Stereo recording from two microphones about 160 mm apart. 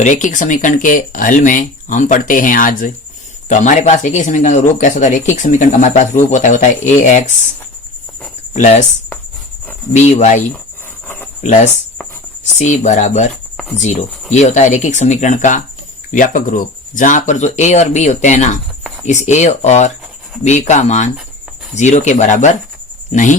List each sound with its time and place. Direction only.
0.0 s speech: 50° left (ahead or behind)
8.5 s speech: 50° left (ahead or behind)
9.9 s speech: 45° left (ahead or behind)
11.4 s speech: 50° left (ahead or behind)